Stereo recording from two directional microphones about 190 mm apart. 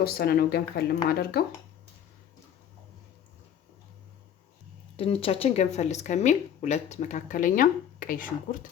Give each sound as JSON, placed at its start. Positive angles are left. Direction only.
{"t": 0.0, "sound": "speech", "side_deg": 55}
{"t": 4.9, "sound": "speech", "side_deg": 30}